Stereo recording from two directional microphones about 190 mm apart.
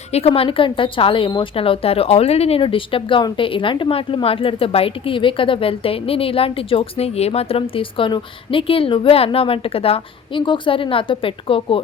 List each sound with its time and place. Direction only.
0.1 s a woman's voice: 35° left (ahead or behind)